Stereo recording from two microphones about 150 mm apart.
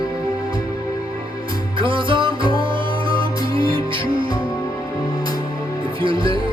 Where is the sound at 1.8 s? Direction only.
35° right (ahead or behind).